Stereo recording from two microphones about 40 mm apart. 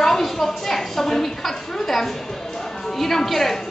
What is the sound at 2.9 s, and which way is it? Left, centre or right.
Speech, centre.